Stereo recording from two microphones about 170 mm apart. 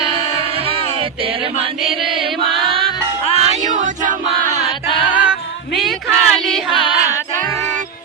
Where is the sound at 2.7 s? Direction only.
30° right (ahead or behind).